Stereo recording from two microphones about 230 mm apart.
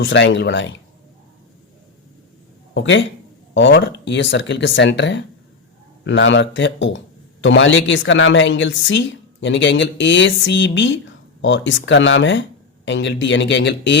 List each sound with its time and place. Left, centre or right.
0.0 s a woman's voice: left
2.7 s a woman's voice: left